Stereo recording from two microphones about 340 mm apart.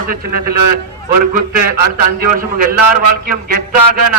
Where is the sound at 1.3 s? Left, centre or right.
Right.